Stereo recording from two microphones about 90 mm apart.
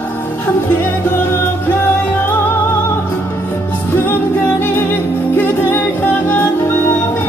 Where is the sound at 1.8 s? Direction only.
25° left (ahead or behind).